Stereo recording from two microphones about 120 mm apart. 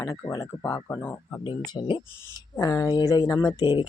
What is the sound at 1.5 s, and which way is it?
Speech, 40° left (ahead or behind).